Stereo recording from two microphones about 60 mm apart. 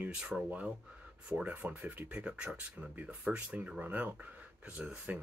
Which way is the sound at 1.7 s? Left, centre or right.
Right.